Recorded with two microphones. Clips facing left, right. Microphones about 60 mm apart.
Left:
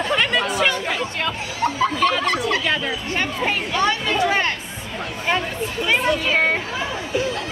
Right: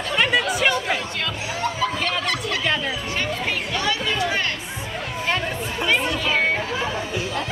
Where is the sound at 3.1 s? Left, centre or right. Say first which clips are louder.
Left 4 dB; left.